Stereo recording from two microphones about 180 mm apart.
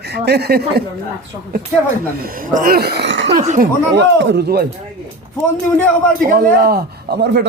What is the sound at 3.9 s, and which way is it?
Speech, 70° right (ahead or behind).